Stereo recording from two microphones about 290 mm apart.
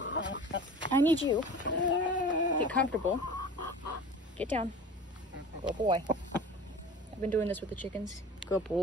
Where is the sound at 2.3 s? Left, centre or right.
Left.